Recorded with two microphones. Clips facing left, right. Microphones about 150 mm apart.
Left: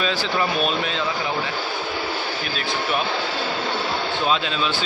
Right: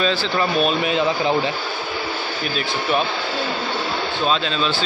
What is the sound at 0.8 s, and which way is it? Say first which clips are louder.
Speech: right 6 dB; 20° right (ahead or behind).